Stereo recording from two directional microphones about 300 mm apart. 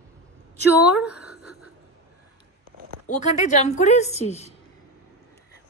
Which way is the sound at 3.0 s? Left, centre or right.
Left.